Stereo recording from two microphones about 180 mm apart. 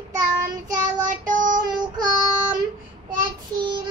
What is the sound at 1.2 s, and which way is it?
Child singing, 45° right (ahead or behind).